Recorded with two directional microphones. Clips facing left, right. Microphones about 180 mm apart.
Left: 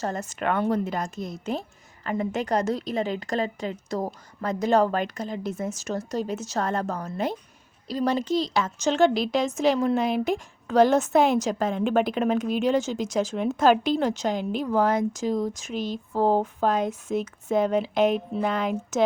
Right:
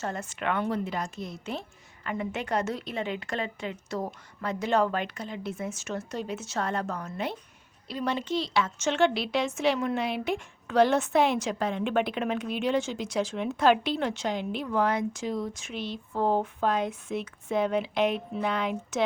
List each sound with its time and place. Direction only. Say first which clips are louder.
0.0 s a woman's voice: left 4 dB; 40° left (ahead or behind)